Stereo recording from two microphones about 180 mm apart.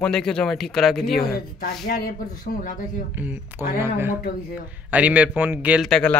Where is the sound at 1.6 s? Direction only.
55° left (ahead or behind).